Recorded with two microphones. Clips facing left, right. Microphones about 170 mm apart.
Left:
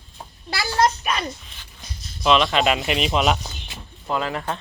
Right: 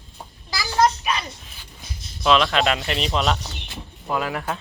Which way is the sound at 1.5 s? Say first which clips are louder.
Right 1 dB; 5° right (ahead or behind).